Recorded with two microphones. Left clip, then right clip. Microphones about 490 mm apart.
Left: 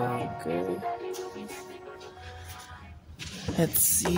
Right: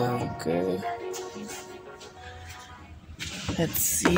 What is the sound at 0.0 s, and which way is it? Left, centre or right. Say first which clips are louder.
Music: right 2 dB; centre.